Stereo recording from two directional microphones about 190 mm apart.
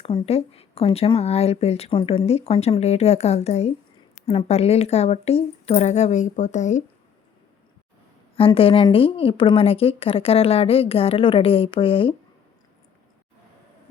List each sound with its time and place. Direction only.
0.0 s speech: 30° left (ahead or behind)
8.4 s a woman's voice: 30° left (ahead or behind)